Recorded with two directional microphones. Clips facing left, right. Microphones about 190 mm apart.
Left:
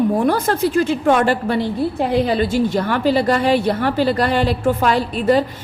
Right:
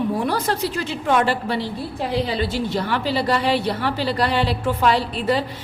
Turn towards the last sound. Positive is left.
turn(degrees=45)  # may be behind; listen again after turning